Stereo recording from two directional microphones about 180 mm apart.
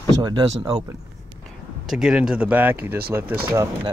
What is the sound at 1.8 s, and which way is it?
Speech, centre (ahead or behind).